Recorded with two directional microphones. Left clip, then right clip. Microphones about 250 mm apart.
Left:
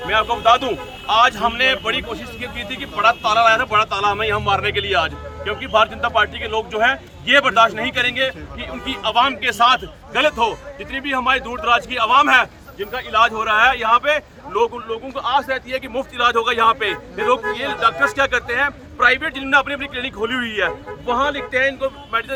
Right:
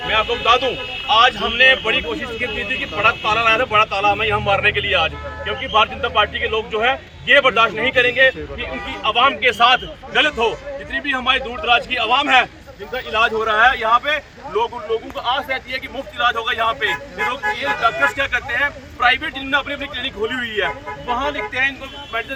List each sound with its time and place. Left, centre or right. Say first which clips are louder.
0.1 s speech: left 1 dB; centre
3.0 s speech: left 2 dB; centre
13.6 s a man's voice: even; left